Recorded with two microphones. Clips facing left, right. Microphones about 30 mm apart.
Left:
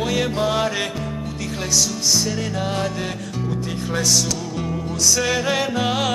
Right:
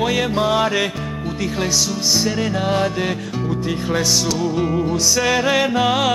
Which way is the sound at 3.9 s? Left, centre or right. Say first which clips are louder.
Right 1 dB; centre.